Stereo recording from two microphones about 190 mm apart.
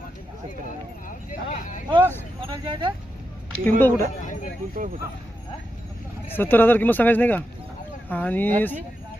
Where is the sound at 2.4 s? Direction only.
25° right (ahead or behind).